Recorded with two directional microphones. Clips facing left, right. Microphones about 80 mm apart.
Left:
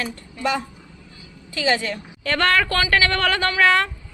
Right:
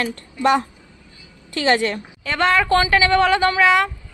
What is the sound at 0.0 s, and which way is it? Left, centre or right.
Speech, right.